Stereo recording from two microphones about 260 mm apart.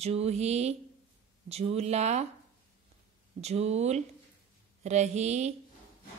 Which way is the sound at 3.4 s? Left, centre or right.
Right.